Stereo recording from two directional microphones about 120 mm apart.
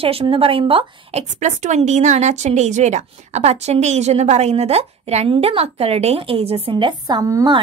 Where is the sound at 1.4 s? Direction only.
80° right; by 6.7 s 55° right (ahead or behind).